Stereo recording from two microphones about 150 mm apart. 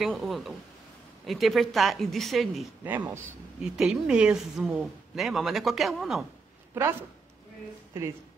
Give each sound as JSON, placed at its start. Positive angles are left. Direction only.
{"t": 0.0, "sound": "speech", "side_deg": 0}
{"t": 6.7, "sound": "a woman's voice", "side_deg": -15}